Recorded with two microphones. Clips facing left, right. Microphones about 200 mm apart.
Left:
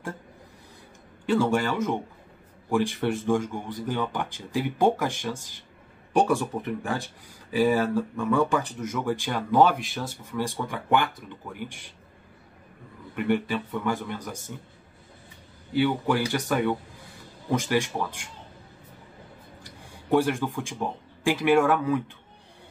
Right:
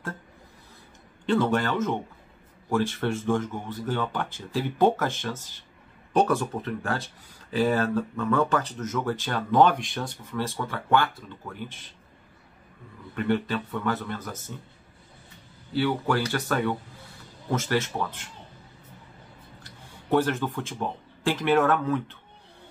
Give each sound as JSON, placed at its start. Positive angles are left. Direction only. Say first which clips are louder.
{"t": 1.2, "sound": "speech", "louder": "even", "side_deg": 10}
{"t": 13.1, "sound": "speech", "louder": "left 1 dB", "side_deg": 15}
{"t": 15.7, "sound": "speech", "louder": "left 1 dB", "side_deg": 15}
{"t": 19.6, "sound": "speech", "louder": "left 2 dB", "side_deg": 10}